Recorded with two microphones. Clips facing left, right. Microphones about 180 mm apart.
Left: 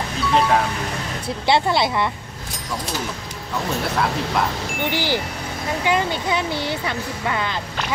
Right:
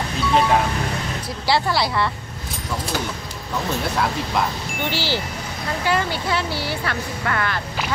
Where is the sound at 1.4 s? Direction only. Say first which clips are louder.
Left 2 dB; 20° left (ahead or behind).